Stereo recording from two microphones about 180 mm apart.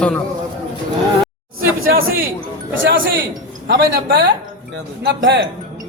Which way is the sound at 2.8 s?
90° right.